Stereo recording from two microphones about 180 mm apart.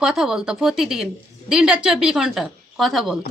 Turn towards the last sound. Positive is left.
turn(degrees=0)  # may be behind; listen again after turning